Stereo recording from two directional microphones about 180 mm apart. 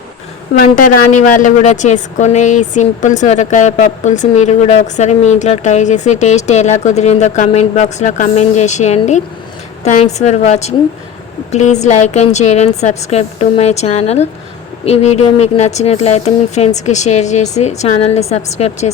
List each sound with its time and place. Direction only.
0.5 s a woman's voice: 55° left (ahead or behind); by 18.9 s 40° left (ahead or behind)